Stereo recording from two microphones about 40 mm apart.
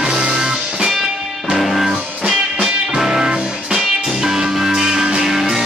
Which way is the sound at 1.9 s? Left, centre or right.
Centre.